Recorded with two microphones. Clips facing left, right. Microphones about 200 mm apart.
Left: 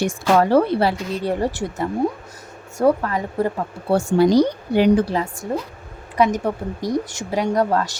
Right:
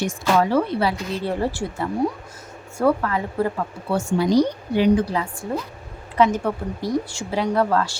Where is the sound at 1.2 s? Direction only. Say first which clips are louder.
Left 2 dB; 15° left (ahead or behind).